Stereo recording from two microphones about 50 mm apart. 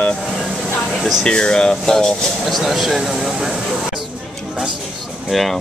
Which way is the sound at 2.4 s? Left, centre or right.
Centre.